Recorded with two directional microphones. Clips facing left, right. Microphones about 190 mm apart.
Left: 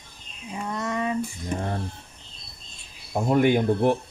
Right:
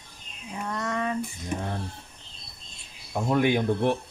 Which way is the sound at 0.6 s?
10° left (ahead or behind).